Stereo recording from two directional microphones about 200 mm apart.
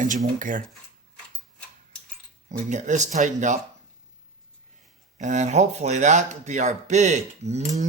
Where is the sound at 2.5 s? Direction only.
40° right (ahead or behind).